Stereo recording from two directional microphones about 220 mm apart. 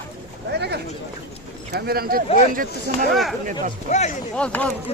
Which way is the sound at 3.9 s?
30° left (ahead or behind).